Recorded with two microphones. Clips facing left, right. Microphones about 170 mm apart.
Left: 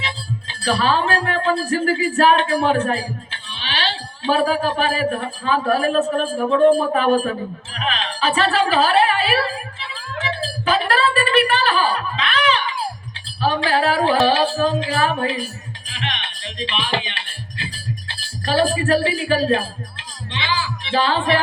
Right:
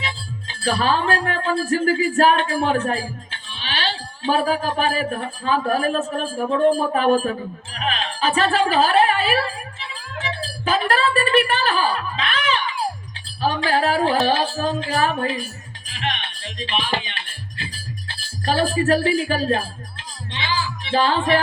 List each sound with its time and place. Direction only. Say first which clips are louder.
0.0 s speech: left 3 dB; 45° right (ahead or behind)
10.7 s a sound: left 1 dB; 45° right (ahead or behind)
15.9 s music: right 2 dB; 45° right (ahead or behind)
16.6 s speech: even; 45° right (ahead or behind)
18.4 s speech: left 1 dB; 45° right (ahead or behind)